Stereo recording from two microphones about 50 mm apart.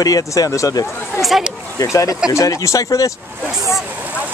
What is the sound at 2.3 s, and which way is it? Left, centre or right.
Speech, left.